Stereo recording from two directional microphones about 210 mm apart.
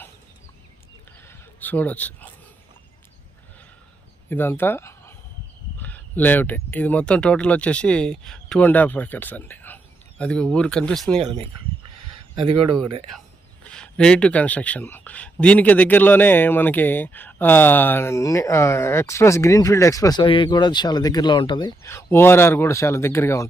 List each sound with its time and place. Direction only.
1.3 s speech: 10° left (ahead or behind)
4.3 s speech: 10° left (ahead or behind)
11.2 s speech: 25° right (ahead or behind)
13.7 s speech: 5° left (ahead or behind)